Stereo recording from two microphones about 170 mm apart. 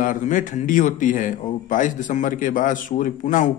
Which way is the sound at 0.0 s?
50° left (ahead or behind).